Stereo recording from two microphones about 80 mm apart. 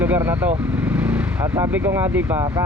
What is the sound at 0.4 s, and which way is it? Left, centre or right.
Speech, centre.